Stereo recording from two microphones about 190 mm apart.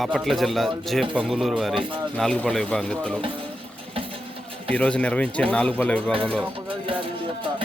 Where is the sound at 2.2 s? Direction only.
5° left (ahead or behind).